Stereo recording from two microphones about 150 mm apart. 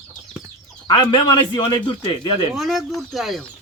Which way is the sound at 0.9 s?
30° left (ahead or behind).